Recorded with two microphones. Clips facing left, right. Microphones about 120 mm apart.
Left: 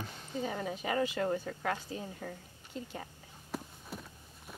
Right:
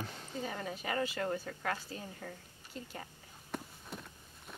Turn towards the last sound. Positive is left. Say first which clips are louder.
# left 1 dB
turn(degrees=5)  # may be behind; listen again after turning